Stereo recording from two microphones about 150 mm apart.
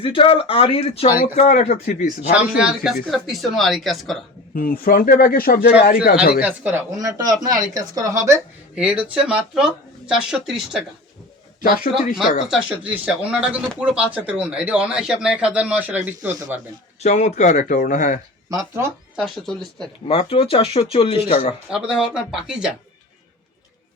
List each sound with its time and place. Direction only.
0.0 s speech: 35° left (ahead or behind)
1.4 s speech: 50° left (ahead or behind)
2.3 s speech: 5° right (ahead or behind)
4.5 s a man's voice: 75° left (ahead or behind)
6.4 s speech: 10° right (ahead or behind)
7.0 s speech: 25° right (ahead or behind)
8.7 s speech: 10° right (ahead or behind)
11.6 s a man's voice: 65° left (ahead or behind)
12.5 s speech: 10° right (ahead or behind)
17.0 s speech: 50° left (ahead or behind)
18.5 s speech: 20° right (ahead or behind)
19.1 s speech: centre (ahead or behind)
20.1 s speech: 40° left (ahead or behind)
21.7 s speech: 5° right (ahead or behind)